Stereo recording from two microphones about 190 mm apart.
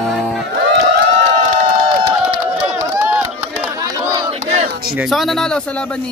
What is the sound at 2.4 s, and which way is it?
Run, 5° right (ahead or behind).